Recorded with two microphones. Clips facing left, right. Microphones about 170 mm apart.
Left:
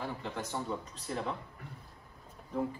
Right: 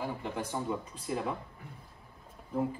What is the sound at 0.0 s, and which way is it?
Speech, 10° right (ahead or behind).